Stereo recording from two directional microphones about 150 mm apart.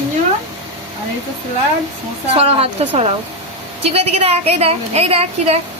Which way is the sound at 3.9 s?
45° right (ahead or behind).